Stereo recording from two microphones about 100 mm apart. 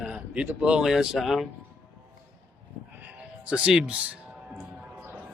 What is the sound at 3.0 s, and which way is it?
Music, 15° right (ahead or behind).